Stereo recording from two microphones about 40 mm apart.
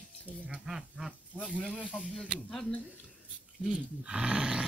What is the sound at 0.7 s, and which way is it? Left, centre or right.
Speech, centre.